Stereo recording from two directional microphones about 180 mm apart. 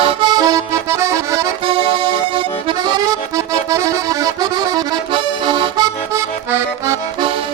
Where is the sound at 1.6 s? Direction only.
30° right (ahead or behind).